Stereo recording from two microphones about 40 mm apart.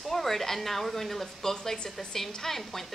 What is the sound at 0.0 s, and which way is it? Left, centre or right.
A woman's voice, centre.